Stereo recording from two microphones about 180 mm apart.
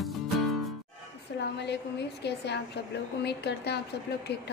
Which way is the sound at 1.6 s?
70° left (ahead or behind).